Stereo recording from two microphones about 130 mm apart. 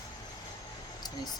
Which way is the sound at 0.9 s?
30° left (ahead or behind).